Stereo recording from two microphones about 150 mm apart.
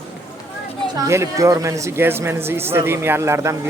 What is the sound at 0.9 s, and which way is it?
Speech, 20° right (ahead or behind).